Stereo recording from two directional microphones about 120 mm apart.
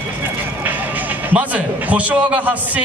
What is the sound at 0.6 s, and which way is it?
A man's voice, 15° right (ahead or behind).